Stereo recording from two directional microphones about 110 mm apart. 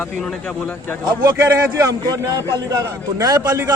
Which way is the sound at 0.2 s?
5° left (ahead or behind).